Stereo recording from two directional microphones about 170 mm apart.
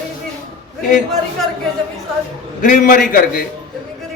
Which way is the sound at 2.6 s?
55° left (ahead or behind).